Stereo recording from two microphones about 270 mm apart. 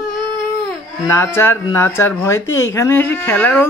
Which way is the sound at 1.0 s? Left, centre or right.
Centre.